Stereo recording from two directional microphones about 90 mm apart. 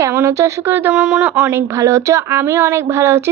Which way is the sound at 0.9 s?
10° right (ahead or behind).